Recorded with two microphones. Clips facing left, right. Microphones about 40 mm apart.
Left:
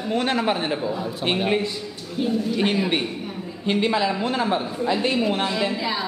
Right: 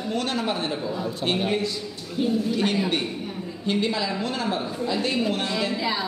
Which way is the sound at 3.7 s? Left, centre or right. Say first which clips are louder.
Left 4 dB; left.